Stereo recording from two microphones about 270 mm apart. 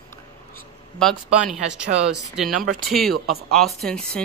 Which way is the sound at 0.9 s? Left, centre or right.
Centre.